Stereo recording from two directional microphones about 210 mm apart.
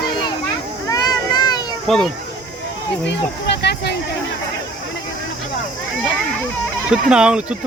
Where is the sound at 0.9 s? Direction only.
20° left (ahead or behind).